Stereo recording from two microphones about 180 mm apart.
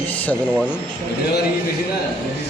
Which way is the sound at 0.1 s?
10° left (ahead or behind).